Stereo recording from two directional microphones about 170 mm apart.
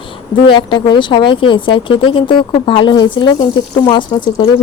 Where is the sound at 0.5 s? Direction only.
30° left (ahead or behind).